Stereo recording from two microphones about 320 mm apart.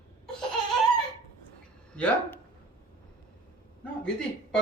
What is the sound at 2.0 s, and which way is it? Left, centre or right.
Speech, centre.